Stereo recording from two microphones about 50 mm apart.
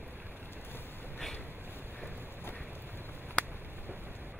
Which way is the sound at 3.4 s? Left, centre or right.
Left.